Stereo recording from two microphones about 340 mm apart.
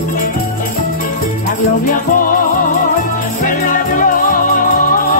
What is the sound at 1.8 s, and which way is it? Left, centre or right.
Music, left.